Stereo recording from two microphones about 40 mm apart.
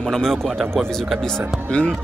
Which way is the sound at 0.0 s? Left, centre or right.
Centre.